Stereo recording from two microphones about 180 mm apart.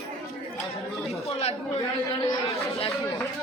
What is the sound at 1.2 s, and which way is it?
Speech, 35° left (ahead or behind).